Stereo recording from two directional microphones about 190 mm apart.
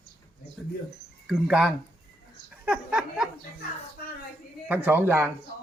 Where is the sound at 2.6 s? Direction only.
5° right (ahead or behind).